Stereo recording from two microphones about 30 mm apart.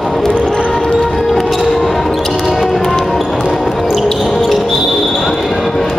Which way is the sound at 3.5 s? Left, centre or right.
Centre.